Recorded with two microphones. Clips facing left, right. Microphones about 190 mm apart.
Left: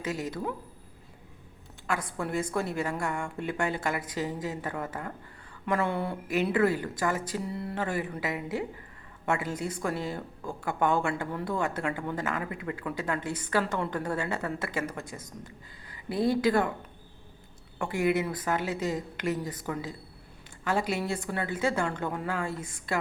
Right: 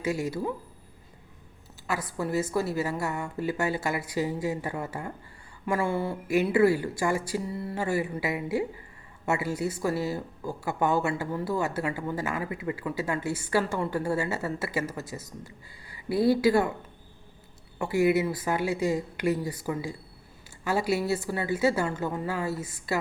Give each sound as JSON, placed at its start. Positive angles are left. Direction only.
{"t": 0.0, "sound": "a woman's voice", "side_deg": -10}
{"t": 1.9, "sound": "a woman's voice", "side_deg": -5}
{"t": 17.7, "sound": "a woman's voice", "side_deg": -10}